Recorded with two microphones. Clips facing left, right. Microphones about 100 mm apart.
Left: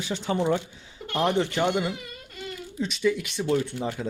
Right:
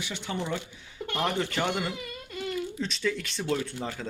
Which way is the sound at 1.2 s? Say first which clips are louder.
Left 5 dB; 20° left (ahead or behind).